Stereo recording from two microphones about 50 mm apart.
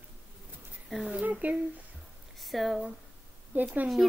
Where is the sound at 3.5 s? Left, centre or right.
Right.